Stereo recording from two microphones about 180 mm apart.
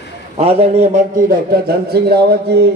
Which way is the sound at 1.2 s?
55° right (ahead or behind).